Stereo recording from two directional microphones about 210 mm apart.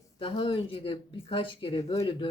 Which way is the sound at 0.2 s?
25° left (ahead or behind).